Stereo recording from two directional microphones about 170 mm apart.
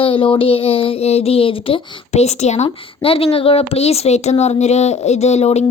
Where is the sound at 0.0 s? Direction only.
30° left (ahead or behind).